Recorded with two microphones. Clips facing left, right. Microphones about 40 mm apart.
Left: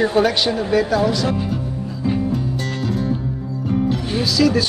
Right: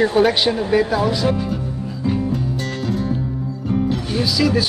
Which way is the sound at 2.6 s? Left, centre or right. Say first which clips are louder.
Even; centre.